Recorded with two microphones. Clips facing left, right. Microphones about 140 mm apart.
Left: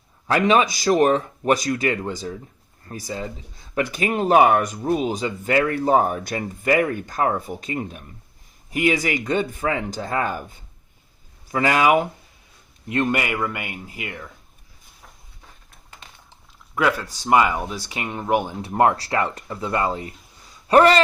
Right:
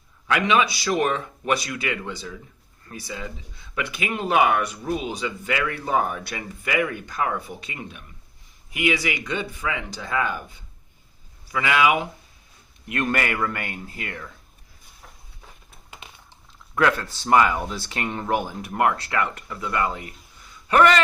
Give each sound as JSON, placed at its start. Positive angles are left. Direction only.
{"t": 0.3, "sound": "speech", "side_deg": 40}
{"t": 12.9, "sound": "speech", "side_deg": 25}
{"t": 13.1, "sound": "speech", "side_deg": 10}
{"t": 16.7, "sound": "speech", "side_deg": 10}
{"t": 18.6, "sound": "speech", "side_deg": 30}